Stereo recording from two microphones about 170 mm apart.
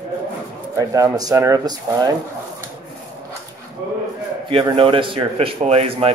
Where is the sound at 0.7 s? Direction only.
20° right (ahead or behind).